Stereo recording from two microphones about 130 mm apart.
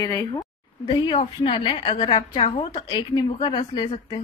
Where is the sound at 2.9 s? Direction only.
35° left (ahead or behind).